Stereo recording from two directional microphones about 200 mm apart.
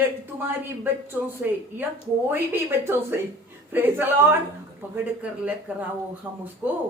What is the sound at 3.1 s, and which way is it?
Speech, 10° right (ahead or behind).